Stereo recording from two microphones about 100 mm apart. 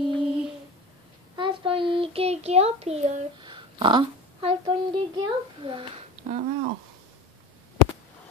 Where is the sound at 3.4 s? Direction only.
55° right (ahead or behind).